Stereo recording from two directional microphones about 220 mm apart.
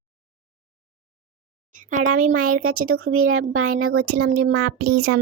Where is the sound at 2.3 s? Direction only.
90° right.